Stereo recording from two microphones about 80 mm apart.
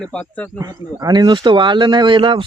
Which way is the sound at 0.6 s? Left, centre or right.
Right.